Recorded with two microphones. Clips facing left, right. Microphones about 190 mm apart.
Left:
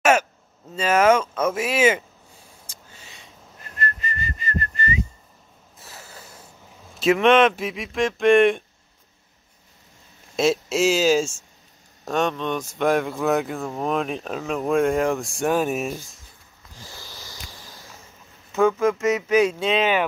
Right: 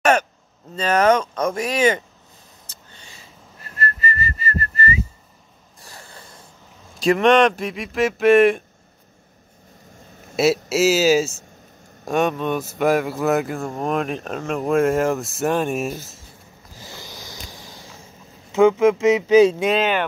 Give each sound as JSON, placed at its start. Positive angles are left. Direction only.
{"t": 0.0, "sound": "a sound", "side_deg": 5}
{"t": 0.7, "sound": "speech", "side_deg": 5}
{"t": 2.7, "sound": "whistling", "side_deg": 5}
{"t": 5.8, "sound": "a sound", "side_deg": 5}
{"t": 7.0, "sound": "speech", "side_deg": 0}
{"t": 10.3, "sound": "speech", "side_deg": -5}
{"t": 16.9, "sound": "a sound", "side_deg": -15}
{"t": 18.5, "sound": "speech", "side_deg": -20}
{"t": 19.7, "sound": "speech", "side_deg": 0}